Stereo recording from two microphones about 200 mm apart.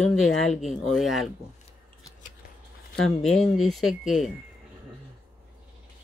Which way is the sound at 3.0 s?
Centre (ahead or behind).